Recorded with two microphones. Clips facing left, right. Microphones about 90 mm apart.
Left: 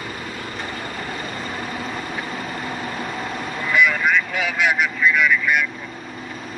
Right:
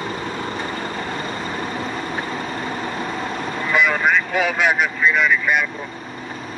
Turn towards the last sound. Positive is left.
turn(degrees=-40)  # may be behind; listen again after turning